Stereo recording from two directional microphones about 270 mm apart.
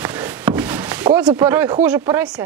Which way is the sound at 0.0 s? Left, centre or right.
Centre.